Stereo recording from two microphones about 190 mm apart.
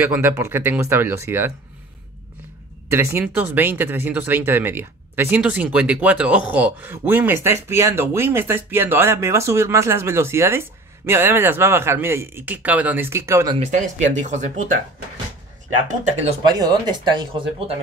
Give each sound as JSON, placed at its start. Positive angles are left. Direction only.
{"t": 0.0, "sound": "speech", "side_deg": -10}
{"t": 2.9, "sound": "speech", "side_deg": -15}
{"t": 13.6, "sound": "speech", "side_deg": -40}
{"t": 16.4, "sound": "speech", "side_deg": -20}